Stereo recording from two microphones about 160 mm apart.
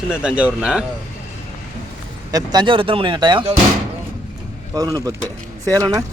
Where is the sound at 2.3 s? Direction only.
25° right (ahead or behind).